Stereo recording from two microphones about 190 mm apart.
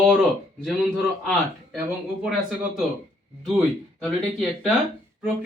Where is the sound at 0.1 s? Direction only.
Centre (ahead or behind).